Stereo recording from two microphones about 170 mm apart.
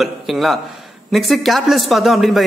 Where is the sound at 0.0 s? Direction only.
Centre (ahead or behind).